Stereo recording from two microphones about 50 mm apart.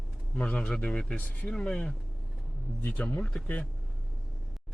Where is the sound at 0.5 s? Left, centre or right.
Centre.